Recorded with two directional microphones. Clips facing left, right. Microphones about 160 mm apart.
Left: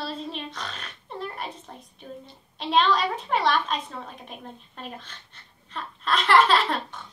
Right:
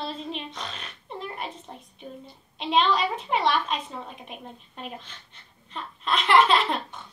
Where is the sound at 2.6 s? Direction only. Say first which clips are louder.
Left 1 dB; 5° right (ahead or behind).